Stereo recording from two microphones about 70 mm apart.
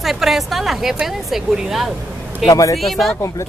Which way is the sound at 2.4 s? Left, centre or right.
Left.